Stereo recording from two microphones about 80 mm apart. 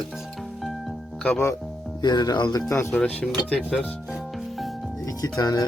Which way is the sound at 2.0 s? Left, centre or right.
Left.